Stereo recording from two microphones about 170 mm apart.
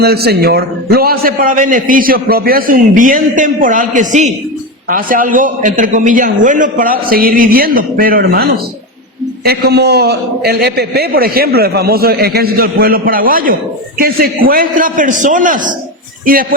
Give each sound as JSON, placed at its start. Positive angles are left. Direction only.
{"t": 0.0, "sound": "a man's voice", "side_deg": -70}